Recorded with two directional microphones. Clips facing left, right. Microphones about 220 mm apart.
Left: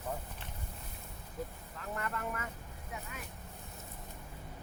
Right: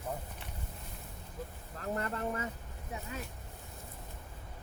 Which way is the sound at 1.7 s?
35° right (ahead or behind).